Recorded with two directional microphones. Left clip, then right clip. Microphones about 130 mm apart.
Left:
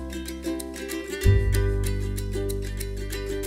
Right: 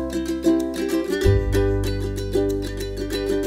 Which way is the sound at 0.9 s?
30° right (ahead or behind).